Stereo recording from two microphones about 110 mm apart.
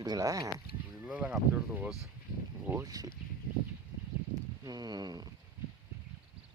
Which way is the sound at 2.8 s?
35° right (ahead or behind).